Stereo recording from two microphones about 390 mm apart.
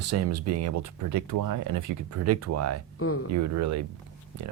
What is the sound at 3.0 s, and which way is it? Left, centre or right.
Speech, left.